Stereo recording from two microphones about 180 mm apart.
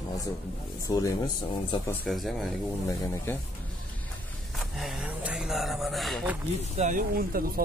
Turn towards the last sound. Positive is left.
turn(degrees=-55)  # may be behind; listen again after turning